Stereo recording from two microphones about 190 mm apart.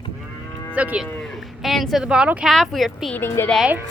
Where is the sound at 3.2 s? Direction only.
10° left (ahead or behind).